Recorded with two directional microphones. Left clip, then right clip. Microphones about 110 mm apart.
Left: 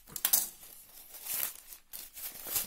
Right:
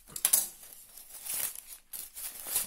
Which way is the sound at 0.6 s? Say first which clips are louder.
Right 1 dB; centre (ahead or behind).